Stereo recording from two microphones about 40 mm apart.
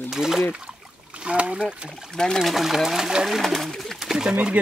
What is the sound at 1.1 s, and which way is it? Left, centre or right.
Speech, right.